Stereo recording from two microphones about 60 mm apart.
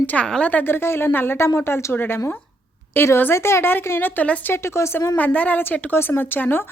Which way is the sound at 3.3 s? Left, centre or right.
Left.